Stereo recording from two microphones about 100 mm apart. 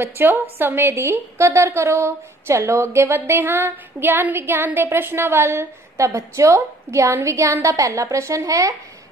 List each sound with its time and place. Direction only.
0.0 s a woman's voice: 20° right (ahead or behind)